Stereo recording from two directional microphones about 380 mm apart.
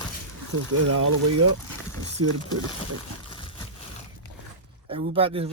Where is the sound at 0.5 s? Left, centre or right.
Right.